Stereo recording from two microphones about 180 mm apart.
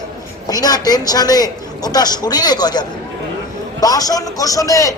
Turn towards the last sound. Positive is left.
turn(degrees=20)  # may be behind; listen again after turning